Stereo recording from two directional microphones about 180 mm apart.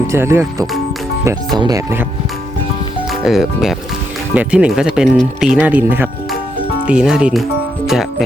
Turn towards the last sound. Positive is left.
turn(degrees=-5)  # may be behind; listen again after turning